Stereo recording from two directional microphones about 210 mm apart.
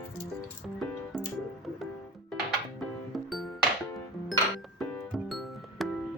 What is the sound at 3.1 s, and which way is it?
Music, centre (ahead or behind).